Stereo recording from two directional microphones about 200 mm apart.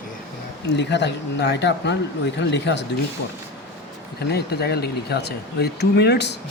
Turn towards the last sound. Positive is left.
turn(degrees=55)  # may be behind; listen again after turning